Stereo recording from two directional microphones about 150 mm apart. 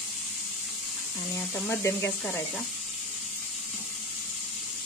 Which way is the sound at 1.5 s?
10° left (ahead or behind).